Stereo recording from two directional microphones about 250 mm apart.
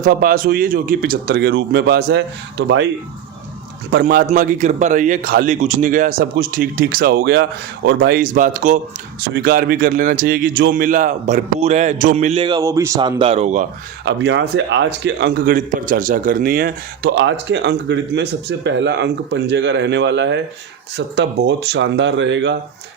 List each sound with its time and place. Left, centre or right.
0.0 s a man's voice: right
3.9 s a man's voice: right
14.0 s a man's voice: right